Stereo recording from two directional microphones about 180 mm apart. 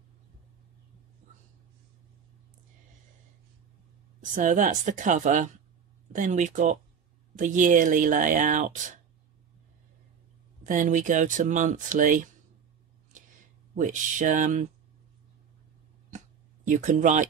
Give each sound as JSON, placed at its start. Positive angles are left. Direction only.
{"t": 4.2, "sound": "speech", "side_deg": -45}
{"t": 10.6, "sound": "speech", "side_deg": -45}
{"t": 13.1, "sound": "a sound", "side_deg": -45}
{"t": 16.6, "sound": "speech", "side_deg": -45}